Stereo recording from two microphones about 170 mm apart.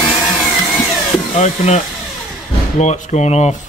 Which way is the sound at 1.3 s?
40° left (ahead or behind).